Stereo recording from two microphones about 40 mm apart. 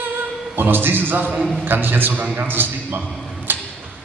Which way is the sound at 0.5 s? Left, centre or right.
Right.